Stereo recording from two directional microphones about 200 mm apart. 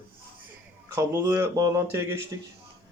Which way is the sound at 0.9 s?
15° right (ahead or behind).